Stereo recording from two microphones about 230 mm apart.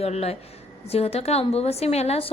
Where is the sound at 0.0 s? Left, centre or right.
Left.